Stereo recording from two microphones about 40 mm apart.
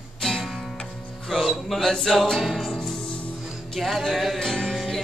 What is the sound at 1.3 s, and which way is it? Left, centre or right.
Music, centre.